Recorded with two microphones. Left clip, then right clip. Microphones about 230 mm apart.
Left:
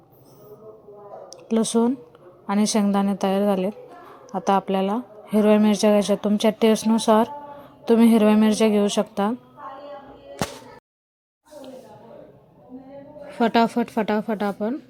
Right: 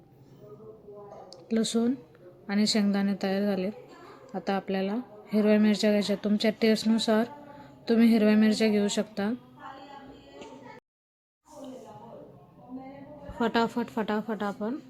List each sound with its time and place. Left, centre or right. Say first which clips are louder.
1.5 s a woman's voice: left 7 dB; centre
13.4 s speech: left 8 dB; left